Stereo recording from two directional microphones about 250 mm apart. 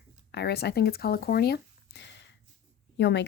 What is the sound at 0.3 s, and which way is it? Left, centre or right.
Speech, left.